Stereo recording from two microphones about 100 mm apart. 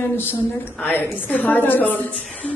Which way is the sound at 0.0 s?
20° left (ahead or behind).